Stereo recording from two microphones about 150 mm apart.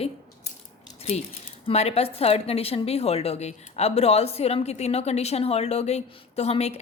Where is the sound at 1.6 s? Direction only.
45° left (ahead or behind).